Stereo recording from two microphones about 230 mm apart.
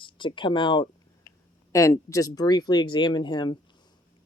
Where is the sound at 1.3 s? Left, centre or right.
Left.